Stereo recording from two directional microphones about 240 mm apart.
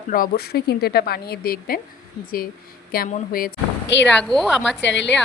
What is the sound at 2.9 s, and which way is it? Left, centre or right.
Speech, left.